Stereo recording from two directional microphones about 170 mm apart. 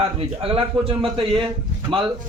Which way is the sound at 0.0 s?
35° right (ahead or behind).